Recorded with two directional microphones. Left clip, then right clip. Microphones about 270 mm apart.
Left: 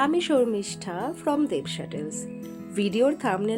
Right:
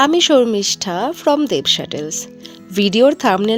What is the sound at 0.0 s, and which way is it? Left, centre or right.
Speech, right.